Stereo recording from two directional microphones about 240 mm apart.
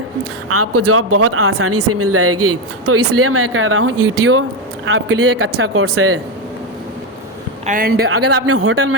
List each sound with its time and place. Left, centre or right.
0.4 s speech: right
7.7 s speech: right
8.0 s speech: right